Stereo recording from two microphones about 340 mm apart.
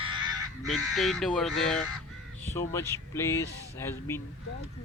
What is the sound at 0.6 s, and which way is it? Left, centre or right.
Speech, centre.